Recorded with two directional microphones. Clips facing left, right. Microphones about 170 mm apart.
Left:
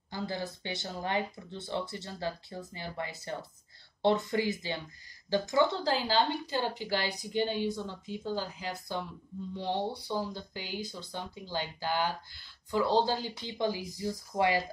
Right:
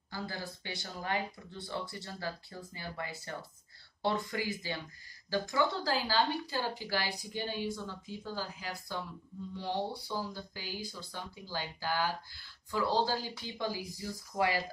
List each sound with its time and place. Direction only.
0.1 s a woman's voice: 20° left (ahead or behind)